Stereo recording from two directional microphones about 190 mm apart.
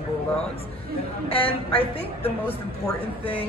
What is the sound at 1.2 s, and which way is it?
Speech, 30° left (ahead or behind).